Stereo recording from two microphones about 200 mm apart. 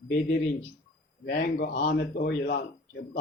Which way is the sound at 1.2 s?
50° left (ahead or behind).